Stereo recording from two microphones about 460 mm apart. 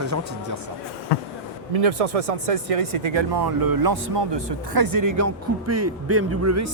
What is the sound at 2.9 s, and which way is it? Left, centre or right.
Speech, right.